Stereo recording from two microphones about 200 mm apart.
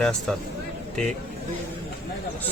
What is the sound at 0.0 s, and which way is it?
Speech, centre (ahead or behind).